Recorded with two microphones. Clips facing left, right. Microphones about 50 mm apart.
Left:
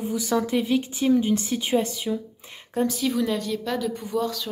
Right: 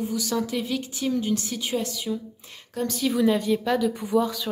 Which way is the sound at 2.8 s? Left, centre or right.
Centre.